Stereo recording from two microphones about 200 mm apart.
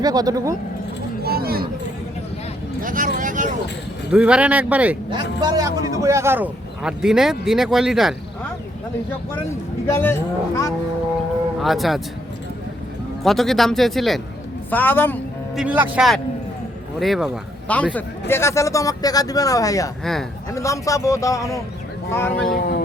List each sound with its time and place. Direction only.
0.0 s speech: 20° right (ahead or behind)
1.2 s a sound: 50° right (ahead or behind)
2.8 s speech: 40° right (ahead or behind)
4.1 s speech: 5° right (ahead or behind)
5.4 s a man's voice: 20° right (ahead or behind); by 8.1 s centre (ahead or behind)
9.3 s speech: 15° left (ahead or behind)
11.6 s a man's voice: centre (ahead or behind)
13.2 s a man's voice: centre (ahead or behind)
15.5 s a man's voice: 5° right (ahead or behind); by 22.5 s 10° left (ahead or behind)
22.5 s a sound: 50° left (ahead or behind)